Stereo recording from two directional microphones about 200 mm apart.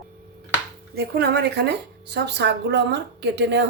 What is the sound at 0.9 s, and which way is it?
Speech, 55° right (ahead or behind).